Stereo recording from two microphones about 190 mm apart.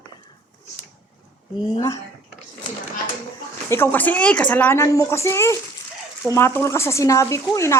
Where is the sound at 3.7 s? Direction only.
10° left (ahead or behind).